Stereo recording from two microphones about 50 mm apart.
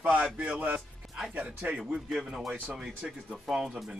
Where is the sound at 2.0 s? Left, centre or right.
Centre.